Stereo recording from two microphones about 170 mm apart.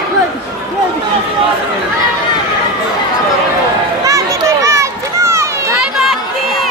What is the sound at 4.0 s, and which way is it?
Children playing, 20° right (ahead or behind).